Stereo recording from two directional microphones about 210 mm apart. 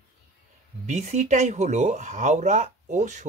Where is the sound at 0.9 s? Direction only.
35° right (ahead or behind).